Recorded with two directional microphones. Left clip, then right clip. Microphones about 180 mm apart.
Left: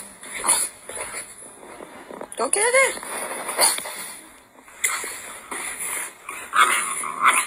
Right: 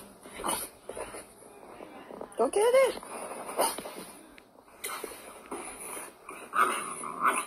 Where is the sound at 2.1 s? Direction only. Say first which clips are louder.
Left 3 dB; 15° left (ahead or behind).